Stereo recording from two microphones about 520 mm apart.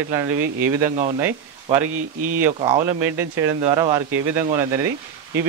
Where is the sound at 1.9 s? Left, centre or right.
Right.